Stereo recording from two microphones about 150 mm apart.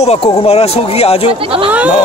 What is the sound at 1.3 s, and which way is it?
Speech, 35° right (ahead or behind).